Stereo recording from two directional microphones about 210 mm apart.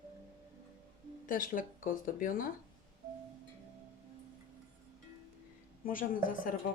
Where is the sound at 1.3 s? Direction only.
40° left (ahead or behind).